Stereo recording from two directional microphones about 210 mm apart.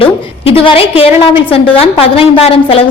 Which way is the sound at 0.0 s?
25° left (ahead or behind).